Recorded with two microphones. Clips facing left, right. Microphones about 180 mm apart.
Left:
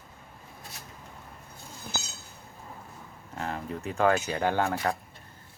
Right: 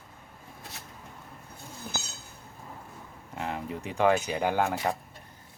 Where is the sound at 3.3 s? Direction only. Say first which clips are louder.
Even; 15° right (ahead or behind).